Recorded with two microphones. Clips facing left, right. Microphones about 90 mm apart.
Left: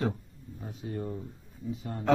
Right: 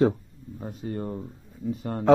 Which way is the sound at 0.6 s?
55° right (ahead or behind).